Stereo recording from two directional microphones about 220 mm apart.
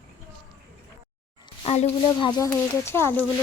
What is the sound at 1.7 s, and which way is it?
Speech, 30° left (ahead or behind).